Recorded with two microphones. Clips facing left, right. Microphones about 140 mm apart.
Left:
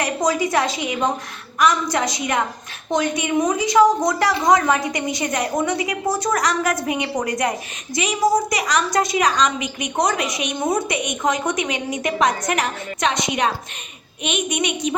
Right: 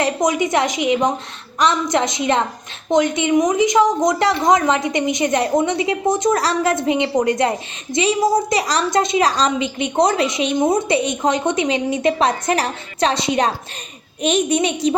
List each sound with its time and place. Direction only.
0.0 s a woman's voice: 20° right (ahead or behind)